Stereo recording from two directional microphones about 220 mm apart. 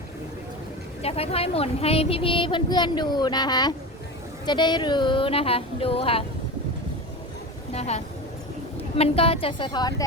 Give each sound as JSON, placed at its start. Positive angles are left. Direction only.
{"t": 1.0, "sound": "speech", "side_deg": 25}
{"t": 7.7, "sound": "a sound", "side_deg": 30}
{"t": 9.0, "sound": "speech", "side_deg": 25}